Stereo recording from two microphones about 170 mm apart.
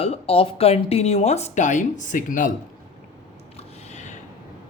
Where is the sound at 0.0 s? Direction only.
35° left (ahead or behind).